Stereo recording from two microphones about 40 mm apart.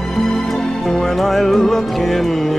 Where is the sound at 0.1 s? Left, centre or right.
Centre.